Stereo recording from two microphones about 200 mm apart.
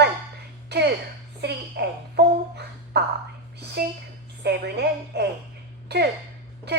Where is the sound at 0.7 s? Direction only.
55° right (ahead or behind).